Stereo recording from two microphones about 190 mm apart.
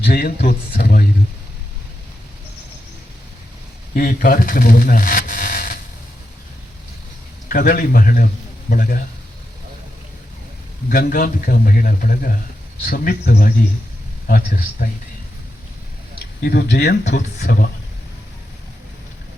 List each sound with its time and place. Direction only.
0.1 s a man's voice: 55° left (ahead or behind)
3.9 s speech: 45° left (ahead or behind)
7.4 s a man's voice: 50° left (ahead or behind)
10.8 s a man's voice: 50° left (ahead or behind)
16.1 s speech: 55° left (ahead or behind)
17.0 s a man's voice: 40° left (ahead or behind)